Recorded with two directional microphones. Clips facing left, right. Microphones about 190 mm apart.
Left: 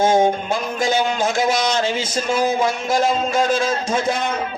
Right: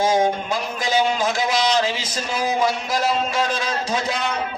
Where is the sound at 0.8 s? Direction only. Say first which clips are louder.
Left 1 dB; 50° left (ahead or behind).